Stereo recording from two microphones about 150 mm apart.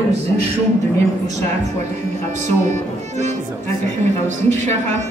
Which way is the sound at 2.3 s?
50° right (ahead or behind).